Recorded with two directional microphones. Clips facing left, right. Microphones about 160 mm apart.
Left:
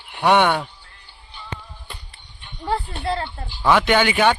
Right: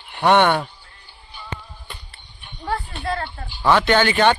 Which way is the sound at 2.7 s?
25° left (ahead or behind).